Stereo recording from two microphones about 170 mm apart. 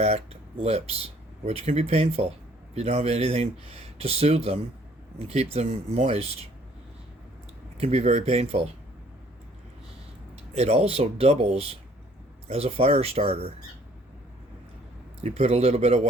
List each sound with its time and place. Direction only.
0.0 s speech: 40° right (ahead or behind)
7.8 s speech: 40° right (ahead or behind)
10.5 s speech: 40° right (ahead or behind)
15.2 s speech: 40° right (ahead or behind)